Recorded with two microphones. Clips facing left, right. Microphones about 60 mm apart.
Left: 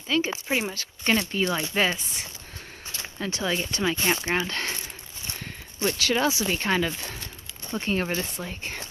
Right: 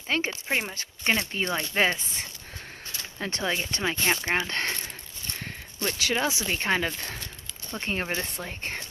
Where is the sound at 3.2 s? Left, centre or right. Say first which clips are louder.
Left 1 dB; right.